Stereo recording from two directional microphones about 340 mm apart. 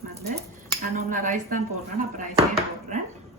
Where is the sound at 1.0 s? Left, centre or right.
Right.